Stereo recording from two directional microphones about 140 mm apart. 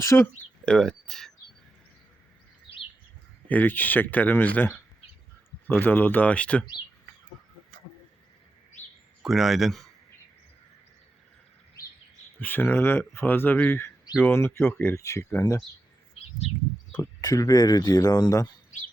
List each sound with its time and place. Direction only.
0.0 s speech: 20° left (ahead or behind)
0.6 s speech: 5° left (ahead or behind)
3.5 s speech: 15° left (ahead or behind)
9.2 s speech: centre (ahead or behind)
12.4 s speech: 15° left (ahead or behind)
17.0 s speech: 20° left (ahead or behind)